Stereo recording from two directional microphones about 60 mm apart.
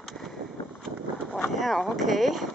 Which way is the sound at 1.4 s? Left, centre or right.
Centre.